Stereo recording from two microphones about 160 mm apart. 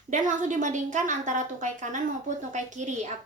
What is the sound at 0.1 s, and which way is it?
A woman's voice, 50° right (ahead or behind).